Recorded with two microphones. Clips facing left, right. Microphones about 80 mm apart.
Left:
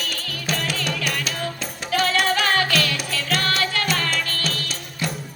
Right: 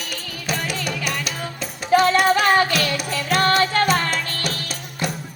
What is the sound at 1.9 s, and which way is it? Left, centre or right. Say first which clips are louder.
Music: right 6 dB; right.